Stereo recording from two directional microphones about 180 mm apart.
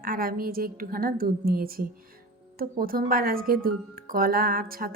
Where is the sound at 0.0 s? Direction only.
55° right (ahead or behind).